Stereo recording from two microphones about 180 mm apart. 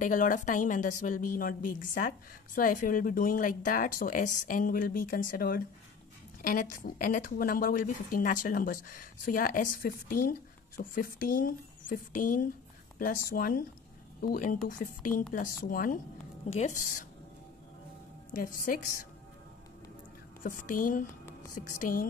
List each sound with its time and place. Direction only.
0.0 s a woman's voice: 50° left (ahead or behind)
18.3 s a woman's voice: 50° left (ahead or behind)
20.4 s a woman's voice: 45° left (ahead or behind)